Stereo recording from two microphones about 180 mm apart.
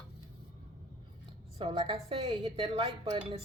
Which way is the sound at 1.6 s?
30° right (ahead or behind).